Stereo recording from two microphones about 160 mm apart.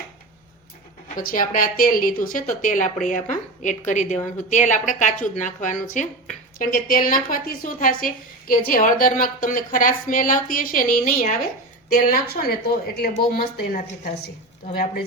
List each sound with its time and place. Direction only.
1.1 s a woman's voice: 60° left (ahead or behind)